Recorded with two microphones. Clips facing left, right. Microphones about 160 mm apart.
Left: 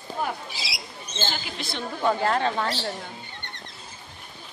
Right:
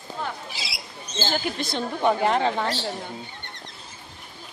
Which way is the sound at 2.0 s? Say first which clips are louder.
Right 2 dB; 20° right (ahead or behind).